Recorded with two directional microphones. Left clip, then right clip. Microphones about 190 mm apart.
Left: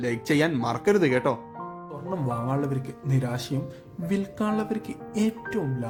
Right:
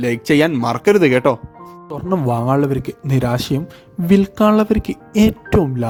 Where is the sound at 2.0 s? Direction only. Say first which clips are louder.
Right 12 dB; 45° right (ahead or behind).